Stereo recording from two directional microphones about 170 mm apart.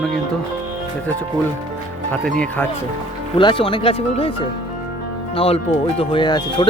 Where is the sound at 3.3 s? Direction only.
30° left (ahead or behind).